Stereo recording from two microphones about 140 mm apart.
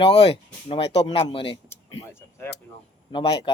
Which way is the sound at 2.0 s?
20° left (ahead or behind).